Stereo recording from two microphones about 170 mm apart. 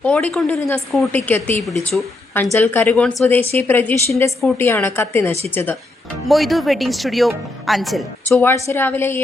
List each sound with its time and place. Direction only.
0.0 s a woman's voice: 5° left (ahead or behind)
6.2 s a woman's voice: centre (ahead or behind)
8.4 s a woman's voice: 15° left (ahead or behind)